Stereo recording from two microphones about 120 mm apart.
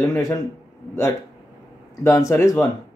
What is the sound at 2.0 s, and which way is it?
Speech, 25° left (ahead or behind).